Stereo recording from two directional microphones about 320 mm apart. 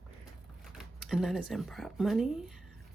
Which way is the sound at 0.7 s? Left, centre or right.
Centre.